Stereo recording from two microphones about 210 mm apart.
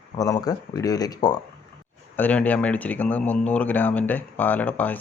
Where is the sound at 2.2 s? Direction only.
5° left (ahead or behind).